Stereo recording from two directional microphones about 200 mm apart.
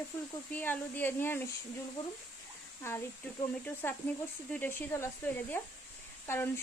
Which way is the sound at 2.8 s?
10° left (ahead or behind).